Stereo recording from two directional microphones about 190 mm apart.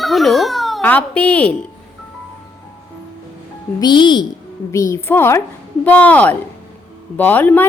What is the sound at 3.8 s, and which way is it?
Speech, 25° left (ahead or behind).